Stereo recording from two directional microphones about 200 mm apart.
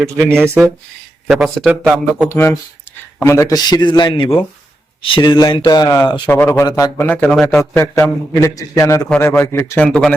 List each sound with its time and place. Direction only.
0.4 s speech: 10° right (ahead or behind)
1.3 s speech: centre (ahead or behind)
2.3 s a man's voice: 10° left (ahead or behind)
6.9 s a man's voice: 10° left (ahead or behind)